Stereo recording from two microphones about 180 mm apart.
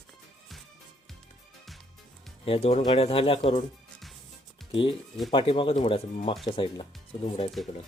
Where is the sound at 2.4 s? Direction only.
35° left (ahead or behind).